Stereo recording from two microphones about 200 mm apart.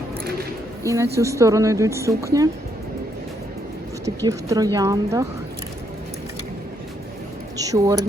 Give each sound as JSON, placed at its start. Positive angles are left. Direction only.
{"t": 0.9, "sound": "speech", "side_deg": -15}
{"t": 4.0, "sound": "speech", "side_deg": -15}
{"t": 7.5, "sound": "a sound", "side_deg": -15}